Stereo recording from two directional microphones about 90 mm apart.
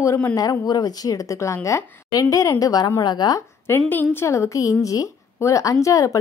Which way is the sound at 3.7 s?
25° left (ahead or behind).